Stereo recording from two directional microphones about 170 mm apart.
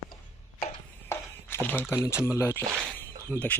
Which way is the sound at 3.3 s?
10° left (ahead or behind).